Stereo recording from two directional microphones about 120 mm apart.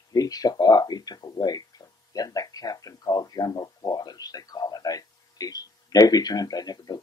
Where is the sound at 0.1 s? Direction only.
30° left (ahead or behind).